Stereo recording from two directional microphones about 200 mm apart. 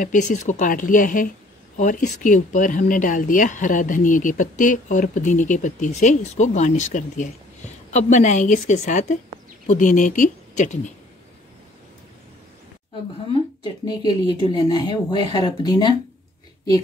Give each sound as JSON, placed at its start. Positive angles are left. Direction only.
{"t": 0.0, "sound": "speech", "side_deg": 40}
{"t": 13.8, "sound": "speech", "side_deg": 20}